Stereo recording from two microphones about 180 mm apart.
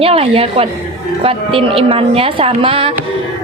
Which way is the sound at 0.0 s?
30° right (ahead or behind).